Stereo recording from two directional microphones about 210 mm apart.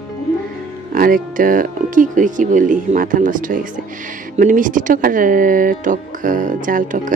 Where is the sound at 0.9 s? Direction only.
40° right (ahead or behind).